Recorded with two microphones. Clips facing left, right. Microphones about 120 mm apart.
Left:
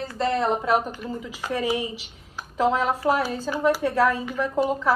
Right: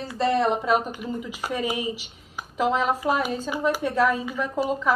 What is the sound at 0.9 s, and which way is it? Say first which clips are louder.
Speech: right 1 dB; 10° right (ahead or behind).